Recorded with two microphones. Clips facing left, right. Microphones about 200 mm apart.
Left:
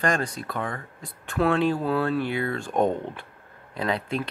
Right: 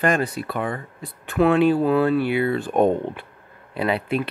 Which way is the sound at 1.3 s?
5° right (ahead or behind).